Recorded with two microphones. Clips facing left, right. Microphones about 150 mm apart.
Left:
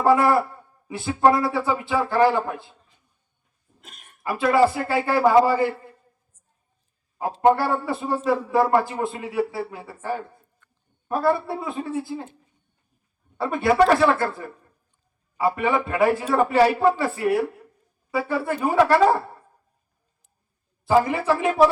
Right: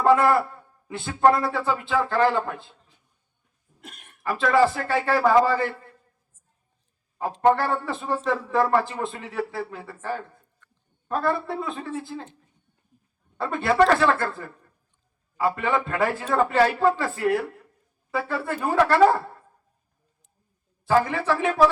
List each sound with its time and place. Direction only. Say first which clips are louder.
0.0 s a man's voice: left 1 dB; 10° left (ahead or behind)
4.2 s a man's voice: left 1 dB; 10° left (ahead or behind)
7.2 s a man's voice: left 2 dB; 15° left (ahead or behind)
20.8 s a man's voice: left 2 dB; 15° left (ahead or behind)